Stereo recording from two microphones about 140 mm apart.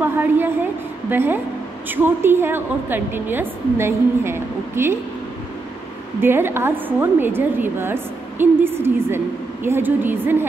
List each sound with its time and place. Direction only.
0.0 s a woman's voice: 15° right (ahead or behind)
6.2 s a woman's voice: 15° right (ahead or behind)